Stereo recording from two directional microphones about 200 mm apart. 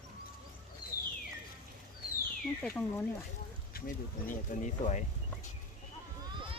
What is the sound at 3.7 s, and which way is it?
Speech, 45° left (ahead or behind).